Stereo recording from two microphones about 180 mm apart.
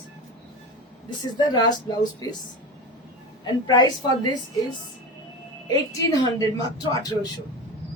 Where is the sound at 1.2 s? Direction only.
25° left (ahead or behind).